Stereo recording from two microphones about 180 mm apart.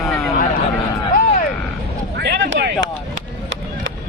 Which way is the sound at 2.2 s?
90° right.